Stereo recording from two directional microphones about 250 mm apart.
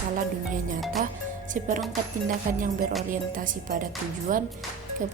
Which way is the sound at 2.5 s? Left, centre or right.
Right.